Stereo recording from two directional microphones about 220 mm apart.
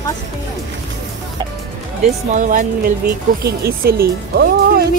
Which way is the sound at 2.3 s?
35° right (ahead or behind).